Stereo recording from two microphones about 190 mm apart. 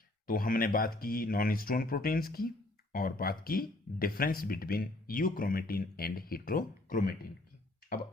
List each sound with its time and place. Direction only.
0.3 s speech: 45° left (ahead or behind)